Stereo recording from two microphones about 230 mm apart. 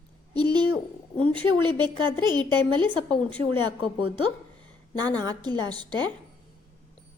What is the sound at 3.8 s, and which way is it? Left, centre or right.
Speech, left.